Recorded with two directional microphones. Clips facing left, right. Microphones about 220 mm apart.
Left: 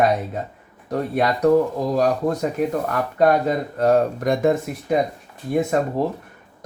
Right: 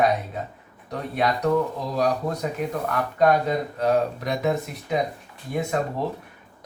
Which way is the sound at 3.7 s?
50° left (ahead or behind).